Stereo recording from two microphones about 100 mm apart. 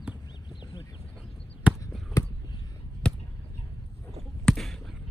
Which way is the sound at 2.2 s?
30° left (ahead or behind).